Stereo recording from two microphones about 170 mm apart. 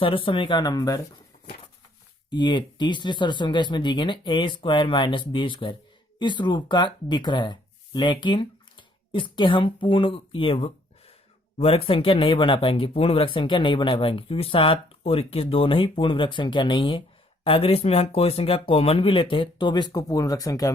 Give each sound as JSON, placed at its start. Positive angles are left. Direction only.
{"t": 0.0, "sound": "speech", "side_deg": 30}
{"t": 2.3, "sound": "speech", "side_deg": 25}